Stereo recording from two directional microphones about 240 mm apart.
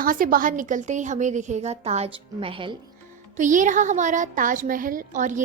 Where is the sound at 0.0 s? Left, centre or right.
Right.